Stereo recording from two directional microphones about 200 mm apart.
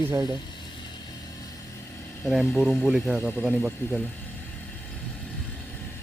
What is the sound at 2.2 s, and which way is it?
Speech, centre (ahead or behind).